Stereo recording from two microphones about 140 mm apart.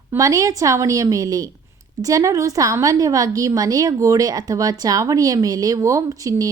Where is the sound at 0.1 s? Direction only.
25° right (ahead or behind).